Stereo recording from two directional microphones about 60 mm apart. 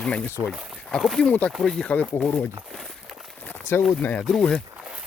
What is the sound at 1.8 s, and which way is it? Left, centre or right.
Speech, left.